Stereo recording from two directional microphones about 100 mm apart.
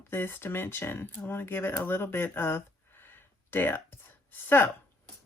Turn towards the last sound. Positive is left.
turn(degrees=20)  # may be behind; listen again after turning